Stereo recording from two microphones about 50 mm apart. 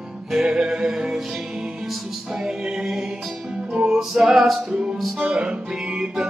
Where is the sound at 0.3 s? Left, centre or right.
Centre.